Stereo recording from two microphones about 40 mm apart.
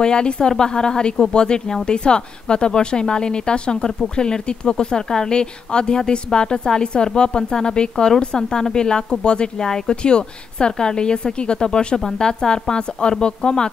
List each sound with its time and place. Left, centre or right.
0.0 s a woman's voice: left